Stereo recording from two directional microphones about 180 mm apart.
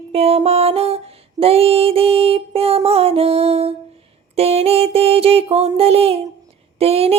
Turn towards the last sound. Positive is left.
turn(degrees=-35)  # may be behind; listen again after turning